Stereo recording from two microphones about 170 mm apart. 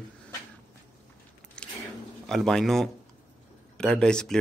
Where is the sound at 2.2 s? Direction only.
5° left (ahead or behind).